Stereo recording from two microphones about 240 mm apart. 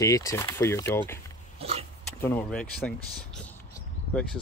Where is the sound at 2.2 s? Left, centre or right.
Centre.